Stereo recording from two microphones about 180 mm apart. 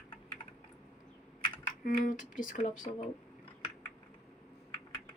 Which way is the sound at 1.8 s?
50° left (ahead or behind).